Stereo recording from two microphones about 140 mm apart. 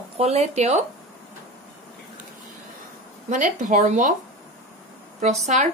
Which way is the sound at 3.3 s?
65° right (ahead or behind).